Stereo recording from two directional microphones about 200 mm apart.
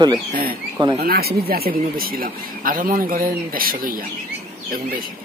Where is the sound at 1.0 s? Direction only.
50° right (ahead or behind).